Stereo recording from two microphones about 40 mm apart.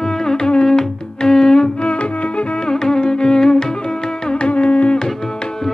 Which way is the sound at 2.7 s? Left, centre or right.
Centre.